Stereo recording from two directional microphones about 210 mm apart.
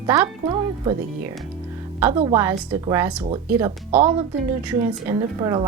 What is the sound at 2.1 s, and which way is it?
Speech, 25° right (ahead or behind).